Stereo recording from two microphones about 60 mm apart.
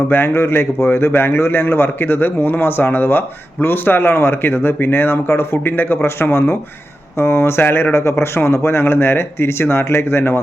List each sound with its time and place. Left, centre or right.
0.1 s a man's voice: left